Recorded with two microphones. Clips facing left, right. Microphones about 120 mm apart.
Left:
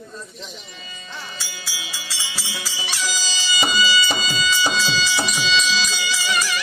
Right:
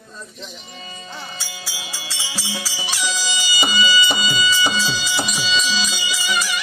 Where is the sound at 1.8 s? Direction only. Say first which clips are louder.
Even; 30° right (ahead or behind).